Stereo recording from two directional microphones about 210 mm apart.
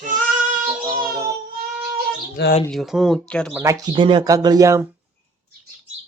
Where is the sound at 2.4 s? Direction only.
50° left (ahead or behind).